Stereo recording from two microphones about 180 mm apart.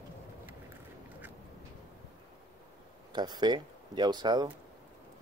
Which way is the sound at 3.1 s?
25° right (ahead or behind).